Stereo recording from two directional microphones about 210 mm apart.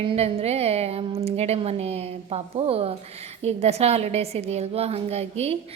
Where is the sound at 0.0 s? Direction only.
25° right (ahead or behind).